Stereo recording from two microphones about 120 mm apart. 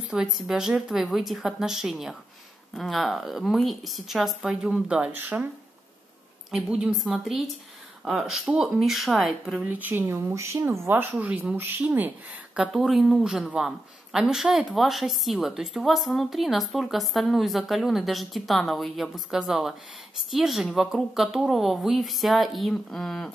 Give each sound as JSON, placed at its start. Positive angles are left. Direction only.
{"t": 0.1, "sound": "speech", "side_deg": -5}
{"t": 6.5, "sound": "speech", "side_deg": -5}
{"t": 9.7, "sound": "speech", "side_deg": -15}
{"t": 12.5, "sound": "speech", "side_deg": -5}